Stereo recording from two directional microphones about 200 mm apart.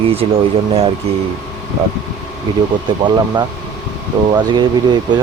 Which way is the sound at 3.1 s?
20° right (ahead or behind).